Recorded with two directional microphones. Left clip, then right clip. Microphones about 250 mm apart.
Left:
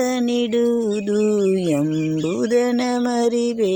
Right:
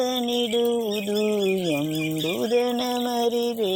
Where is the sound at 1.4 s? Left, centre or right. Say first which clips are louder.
Left 5 dB; left.